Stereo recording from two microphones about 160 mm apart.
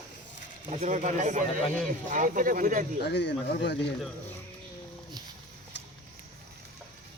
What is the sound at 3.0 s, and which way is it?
Speech, 90° left.